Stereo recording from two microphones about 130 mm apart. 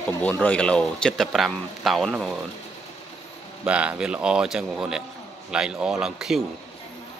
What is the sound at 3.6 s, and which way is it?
A man's voice, 10° right (ahead or behind).